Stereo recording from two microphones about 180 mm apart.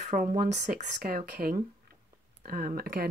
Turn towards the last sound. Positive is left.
turn(degrees=-55)  # may be behind; listen again after turning